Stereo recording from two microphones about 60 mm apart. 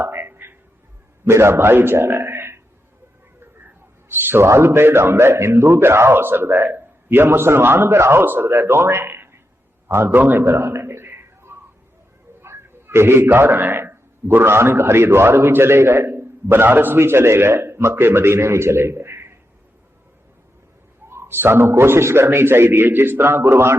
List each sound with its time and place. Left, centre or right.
0.0 s a sound: right
1.2 s a man's voice: right
4.1 s a man's voice: right
4.4 s a man's voice: right
8.2 s a man's voice: right
10.2 s a man's voice: right
10.4 s a sound: right
12.4 s a man's voice: right
21.1 s a man's voice: right